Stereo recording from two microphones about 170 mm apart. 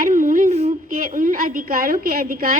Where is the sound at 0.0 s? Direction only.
55° right (ahead or behind).